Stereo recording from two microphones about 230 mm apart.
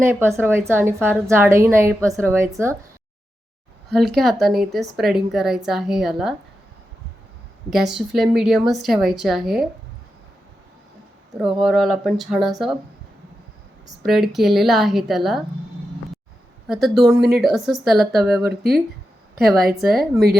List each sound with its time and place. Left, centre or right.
0.0 s a woman's voice: centre
3.8 s a woman's voice: centre
7.7 s a woman's voice: centre
11.4 s a woman's voice: centre
14.0 s a woman's voice: centre
16.6 s a woman's voice: centre
19.9 s a woman's voice: centre